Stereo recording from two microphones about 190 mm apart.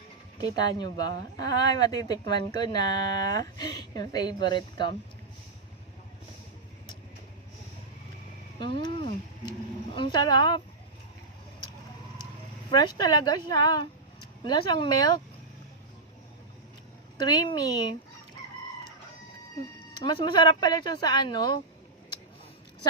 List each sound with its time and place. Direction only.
0.4 s speech: 20° left (ahead or behind)
8.7 s speech: 25° left (ahead or behind)
12.7 s speech: 20° left (ahead or behind)
17.2 s speech: 20° left (ahead or behind)
20.0 s speech: 25° left (ahead or behind)